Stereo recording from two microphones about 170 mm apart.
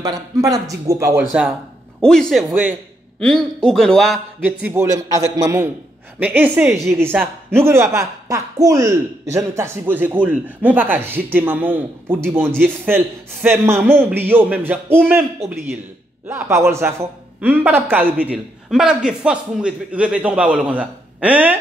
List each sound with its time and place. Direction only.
0.0 s speech: 20° right (ahead or behind)
2.0 s a man's voice: 5° left (ahead or behind)
4.6 s a man's voice: 15° right (ahead or behind)